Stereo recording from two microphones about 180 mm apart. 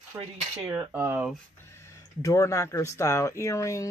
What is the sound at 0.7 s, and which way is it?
Speech, 10° right (ahead or behind).